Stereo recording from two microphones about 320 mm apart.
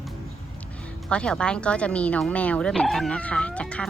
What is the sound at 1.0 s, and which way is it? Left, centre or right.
Speech, centre.